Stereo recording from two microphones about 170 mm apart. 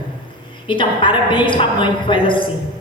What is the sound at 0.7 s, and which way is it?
A man's voice, 30° left (ahead or behind).